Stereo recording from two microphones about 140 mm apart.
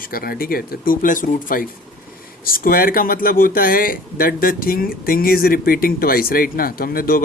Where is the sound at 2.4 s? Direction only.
90° left.